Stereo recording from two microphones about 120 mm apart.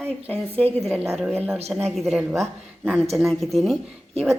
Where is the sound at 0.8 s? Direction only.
Centre (ahead or behind).